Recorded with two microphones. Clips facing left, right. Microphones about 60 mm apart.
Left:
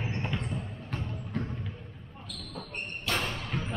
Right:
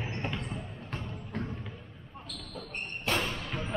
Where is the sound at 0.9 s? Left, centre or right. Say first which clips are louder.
Left 3 dB; centre.